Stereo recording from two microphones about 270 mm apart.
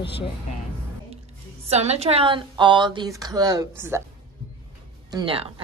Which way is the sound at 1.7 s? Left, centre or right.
Right.